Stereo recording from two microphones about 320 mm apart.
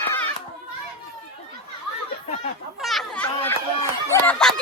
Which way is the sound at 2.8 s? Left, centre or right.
Centre.